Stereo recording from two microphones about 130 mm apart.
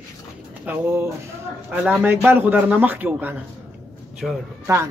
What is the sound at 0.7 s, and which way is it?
Speech, 15° right (ahead or behind).